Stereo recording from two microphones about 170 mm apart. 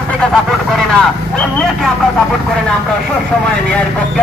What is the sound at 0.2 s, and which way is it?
Speech, centre (ahead or behind).